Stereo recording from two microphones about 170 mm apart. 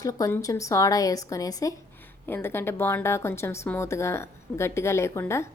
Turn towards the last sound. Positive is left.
turn(degrees=15)  # may be behind; listen again after turning